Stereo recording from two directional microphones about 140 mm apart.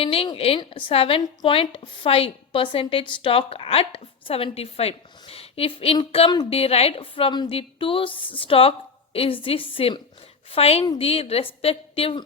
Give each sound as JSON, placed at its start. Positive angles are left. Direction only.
{"t": 0.0, "sound": "a woman's voice", "side_deg": 40}